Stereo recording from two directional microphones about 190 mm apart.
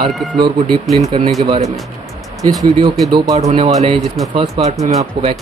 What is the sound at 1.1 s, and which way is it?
Speech, 25° right (ahead or behind).